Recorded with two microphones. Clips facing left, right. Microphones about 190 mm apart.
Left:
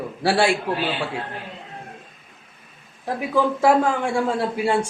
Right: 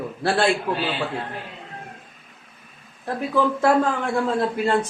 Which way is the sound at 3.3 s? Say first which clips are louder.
Left 1 dB; 10° left (ahead or behind).